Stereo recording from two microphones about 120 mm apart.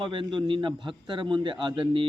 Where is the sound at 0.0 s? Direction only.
45° right (ahead or behind).